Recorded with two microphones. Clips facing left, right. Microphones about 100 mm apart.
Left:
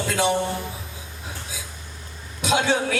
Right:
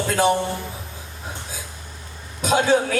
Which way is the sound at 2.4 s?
40° right (ahead or behind).